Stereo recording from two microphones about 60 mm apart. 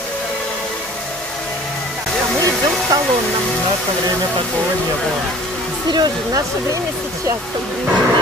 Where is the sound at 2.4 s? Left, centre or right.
Right.